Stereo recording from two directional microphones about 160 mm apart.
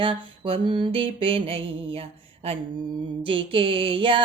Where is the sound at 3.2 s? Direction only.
35° right (ahead or behind).